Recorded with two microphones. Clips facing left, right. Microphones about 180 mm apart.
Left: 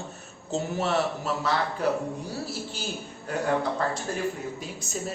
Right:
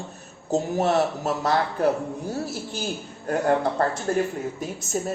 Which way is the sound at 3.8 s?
50° right (ahead or behind).